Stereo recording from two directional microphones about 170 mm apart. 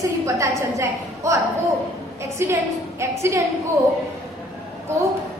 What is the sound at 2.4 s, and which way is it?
A woman's voice, 15° right (ahead or behind).